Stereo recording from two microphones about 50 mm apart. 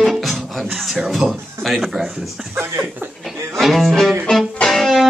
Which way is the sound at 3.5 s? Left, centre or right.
Centre.